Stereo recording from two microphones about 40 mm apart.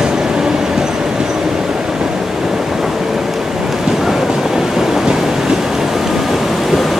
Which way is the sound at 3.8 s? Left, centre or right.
Centre.